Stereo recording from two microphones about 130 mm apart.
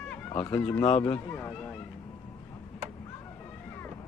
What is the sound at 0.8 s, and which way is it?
Speech, 55° left (ahead or behind).